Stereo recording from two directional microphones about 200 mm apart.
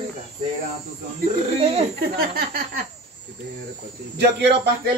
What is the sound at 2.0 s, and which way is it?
Music, 50° right (ahead or behind).